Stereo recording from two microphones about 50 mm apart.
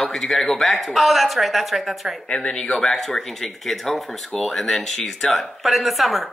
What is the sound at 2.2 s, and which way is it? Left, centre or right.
Speech, centre.